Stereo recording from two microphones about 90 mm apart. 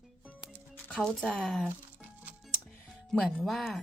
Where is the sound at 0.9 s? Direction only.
5° left (ahead or behind).